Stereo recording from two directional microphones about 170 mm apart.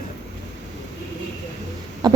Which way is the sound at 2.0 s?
25° right (ahead or behind).